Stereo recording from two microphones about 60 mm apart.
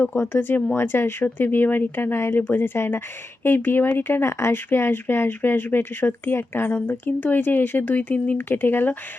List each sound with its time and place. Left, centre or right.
0.2 s speech: left